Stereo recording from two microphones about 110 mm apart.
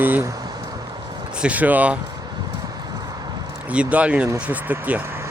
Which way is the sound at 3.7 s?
10° right (ahead or behind).